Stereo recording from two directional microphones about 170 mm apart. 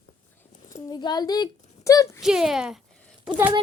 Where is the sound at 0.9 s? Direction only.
25° left (ahead or behind).